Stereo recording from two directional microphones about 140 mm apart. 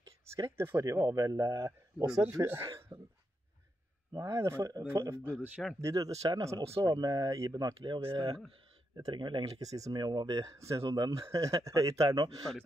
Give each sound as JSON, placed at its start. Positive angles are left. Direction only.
{"t": 0.4, "sound": "speech", "side_deg": -20}
{"t": 2.9, "sound": "cough", "side_deg": -35}
{"t": 4.1, "sound": "speech", "side_deg": -20}